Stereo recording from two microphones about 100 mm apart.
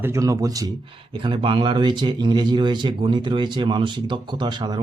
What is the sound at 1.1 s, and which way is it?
Speech, 60° right (ahead or behind).